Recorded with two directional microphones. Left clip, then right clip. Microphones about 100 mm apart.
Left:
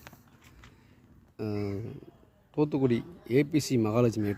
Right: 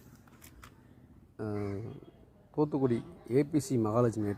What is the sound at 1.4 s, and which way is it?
Speech, 45° left (ahead or behind).